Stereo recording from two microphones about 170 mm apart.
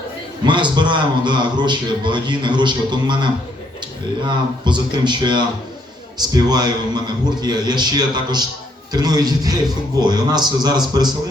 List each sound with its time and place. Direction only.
0.4 s a man's voice: 25° right (ahead or behind)